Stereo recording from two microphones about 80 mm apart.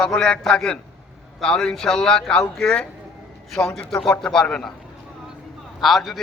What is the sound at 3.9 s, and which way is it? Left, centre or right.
Speech, centre.